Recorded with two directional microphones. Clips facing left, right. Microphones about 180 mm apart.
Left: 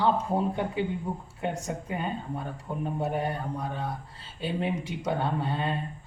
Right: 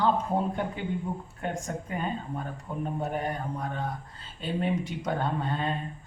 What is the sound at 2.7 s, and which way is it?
Speech, 20° left (ahead or behind).